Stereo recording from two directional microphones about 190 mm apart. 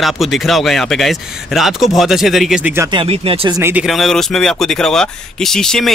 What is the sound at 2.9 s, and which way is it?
Speech, 30° right (ahead or behind).